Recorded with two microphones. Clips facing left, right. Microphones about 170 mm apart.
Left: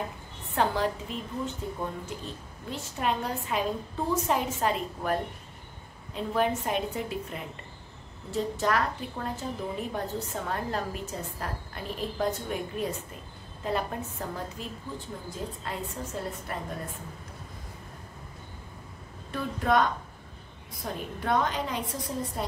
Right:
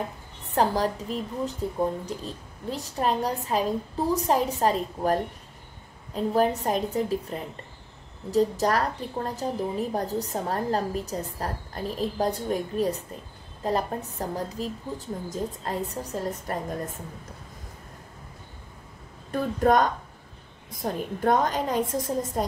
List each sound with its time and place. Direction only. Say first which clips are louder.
0.6 s a woman's voice: right 3 dB; 35° right (ahead or behind)
19.3 s a woman's voice: right 4 dB; 45° right (ahead or behind)